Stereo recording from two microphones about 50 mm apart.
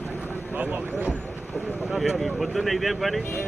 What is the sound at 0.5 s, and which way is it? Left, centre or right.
Speech, right.